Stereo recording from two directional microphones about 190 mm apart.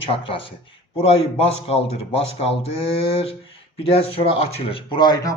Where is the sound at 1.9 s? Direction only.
30° left (ahead or behind).